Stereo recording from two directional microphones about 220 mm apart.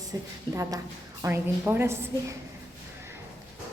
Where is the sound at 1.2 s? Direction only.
10° right (ahead or behind).